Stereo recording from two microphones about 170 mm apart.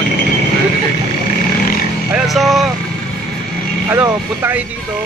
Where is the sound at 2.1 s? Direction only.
Centre (ahead or behind).